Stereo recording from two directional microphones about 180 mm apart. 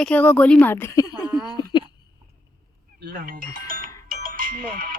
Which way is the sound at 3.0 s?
65° right (ahead or behind).